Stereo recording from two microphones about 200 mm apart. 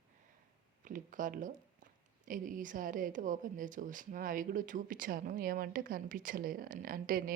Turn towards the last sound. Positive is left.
turn(degrees=-45)  # may be behind; listen again after turning